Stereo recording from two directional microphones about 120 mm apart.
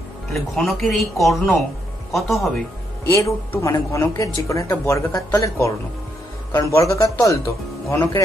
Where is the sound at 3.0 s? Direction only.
20° left (ahead or behind).